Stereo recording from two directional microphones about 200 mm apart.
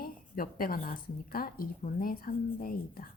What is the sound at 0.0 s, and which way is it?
A woman's voice, 45° left (ahead or behind).